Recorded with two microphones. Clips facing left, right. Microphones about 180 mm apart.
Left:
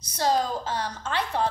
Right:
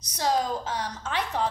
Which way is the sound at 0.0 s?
15° right (ahead or behind).